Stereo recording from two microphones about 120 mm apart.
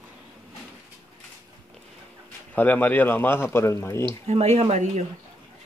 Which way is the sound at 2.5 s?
15° left (ahead or behind).